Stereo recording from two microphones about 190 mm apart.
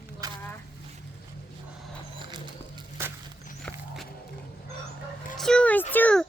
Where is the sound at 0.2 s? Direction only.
20° right (ahead or behind).